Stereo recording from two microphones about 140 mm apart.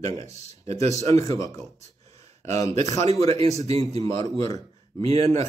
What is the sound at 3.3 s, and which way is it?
Speech, 50° right (ahead or behind).